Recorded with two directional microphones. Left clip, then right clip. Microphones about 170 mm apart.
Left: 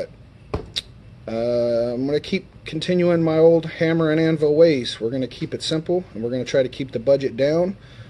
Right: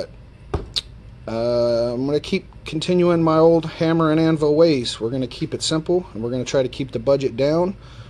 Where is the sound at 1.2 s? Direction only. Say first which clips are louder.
Right 1 dB; 30° right (ahead or behind).